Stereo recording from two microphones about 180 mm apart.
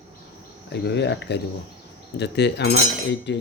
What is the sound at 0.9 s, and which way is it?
A man's voice, 70° left (ahead or behind).